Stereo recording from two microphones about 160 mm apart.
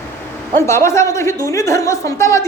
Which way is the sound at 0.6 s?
15° left (ahead or behind).